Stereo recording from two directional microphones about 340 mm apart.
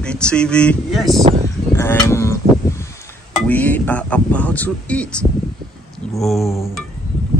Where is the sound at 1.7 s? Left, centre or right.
Centre.